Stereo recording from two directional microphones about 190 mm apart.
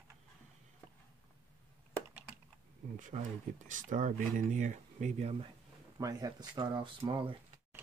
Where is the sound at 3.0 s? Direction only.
40° right (ahead or behind).